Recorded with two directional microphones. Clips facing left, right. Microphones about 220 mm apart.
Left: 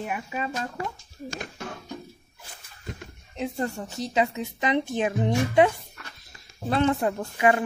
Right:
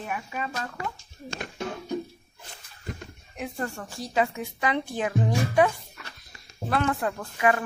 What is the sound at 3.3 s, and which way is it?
A woman's voice, 25° left (ahead or behind).